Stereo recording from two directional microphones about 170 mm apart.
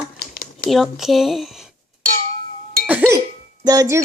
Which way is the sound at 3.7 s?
20° right (ahead or behind).